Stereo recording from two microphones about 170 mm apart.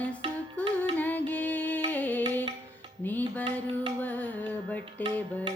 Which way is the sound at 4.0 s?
10° left (ahead or behind).